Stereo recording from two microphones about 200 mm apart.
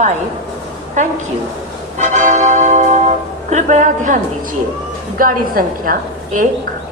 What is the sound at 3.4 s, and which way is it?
A woman's voice, 35° right (ahead or behind).